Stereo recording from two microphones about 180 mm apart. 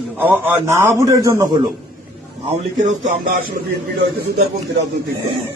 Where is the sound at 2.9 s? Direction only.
40° right (ahead or behind).